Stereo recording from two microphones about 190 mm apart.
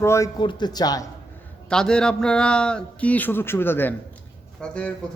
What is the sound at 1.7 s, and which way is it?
Speech, 5° left (ahead or behind).